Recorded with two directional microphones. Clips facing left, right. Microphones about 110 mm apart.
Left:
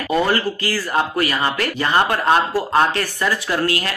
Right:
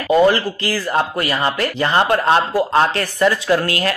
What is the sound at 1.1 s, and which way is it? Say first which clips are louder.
Speech: right 1 dB; 30° right (ahead or behind).